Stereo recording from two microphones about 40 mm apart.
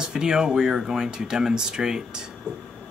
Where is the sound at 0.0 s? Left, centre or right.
Centre.